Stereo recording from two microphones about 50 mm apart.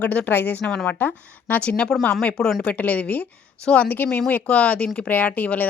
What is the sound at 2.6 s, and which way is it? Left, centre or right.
A woman's voice, left.